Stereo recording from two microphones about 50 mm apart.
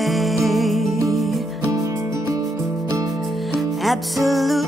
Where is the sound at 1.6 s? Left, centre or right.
Right.